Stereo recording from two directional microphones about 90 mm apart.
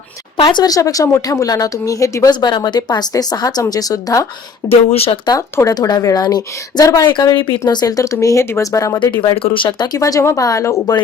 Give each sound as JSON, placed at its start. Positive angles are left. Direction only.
{"t": 0.3, "sound": "a woman's voice", "side_deg": 55}
{"t": 2.4, "sound": "a woman's voice", "side_deg": 55}
{"t": 4.7, "sound": "speech", "side_deg": 90}
{"t": 5.7, "sound": "speech", "side_deg": 45}
{"t": 7.1, "sound": "speech", "side_deg": 55}
{"t": 7.7, "sound": "a woman's voice", "side_deg": 45}
{"t": 9.1, "sound": "speech", "side_deg": 85}
{"t": 9.6, "sound": "a woman's voice", "side_deg": 55}